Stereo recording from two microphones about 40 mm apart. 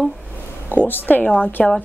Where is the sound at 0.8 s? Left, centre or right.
Left.